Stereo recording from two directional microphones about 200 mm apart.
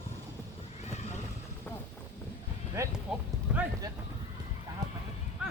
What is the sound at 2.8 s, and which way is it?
Music, 15° right (ahead or behind).